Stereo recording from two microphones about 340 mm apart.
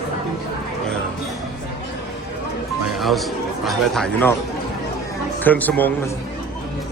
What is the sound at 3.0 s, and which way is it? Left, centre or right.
Speech, centre.